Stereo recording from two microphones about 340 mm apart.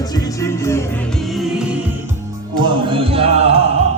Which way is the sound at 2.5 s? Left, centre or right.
Centre.